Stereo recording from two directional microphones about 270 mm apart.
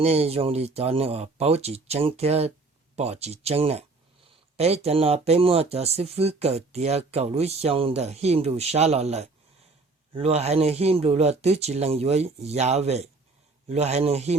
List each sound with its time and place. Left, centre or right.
0.0 s speech: right